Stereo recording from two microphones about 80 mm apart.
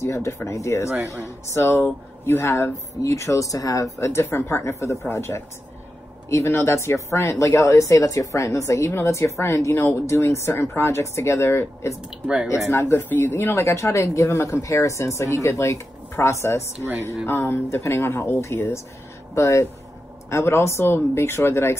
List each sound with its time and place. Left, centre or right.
0.0 s speech: left